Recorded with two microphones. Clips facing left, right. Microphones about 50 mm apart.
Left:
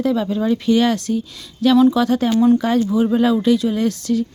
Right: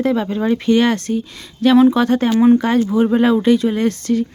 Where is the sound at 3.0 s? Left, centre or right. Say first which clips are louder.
Right 3 dB; right.